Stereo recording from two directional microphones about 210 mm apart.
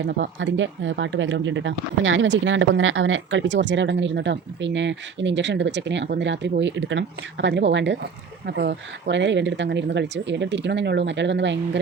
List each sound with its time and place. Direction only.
0.0 s speech: 65° right (ahead or behind)